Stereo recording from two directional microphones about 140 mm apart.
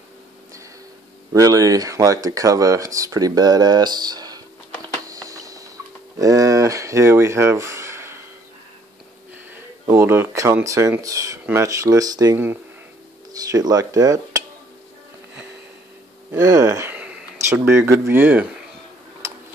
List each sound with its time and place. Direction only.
1.3 s speech: 25° right (ahead or behind)
5.0 s a sound: 25° right (ahead or behind)
6.1 s speech: 25° right (ahead or behind)
9.8 s speech: 15° right (ahead or behind)
13.3 s dishes: 25° right (ahead or behind)
16.3 s speech: 20° right (ahead or behind)
16.9 s a sound: 10° right (ahead or behind)
17.5 s speech: 20° right (ahead or behind)